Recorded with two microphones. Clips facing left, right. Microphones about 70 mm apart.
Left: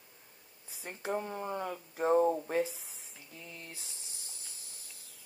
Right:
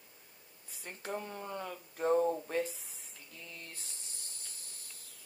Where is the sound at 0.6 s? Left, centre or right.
Centre.